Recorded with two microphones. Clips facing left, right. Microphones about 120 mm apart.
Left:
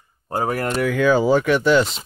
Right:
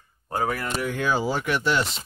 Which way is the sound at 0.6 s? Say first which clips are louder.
Left 7 dB; 65° left (ahead or behind).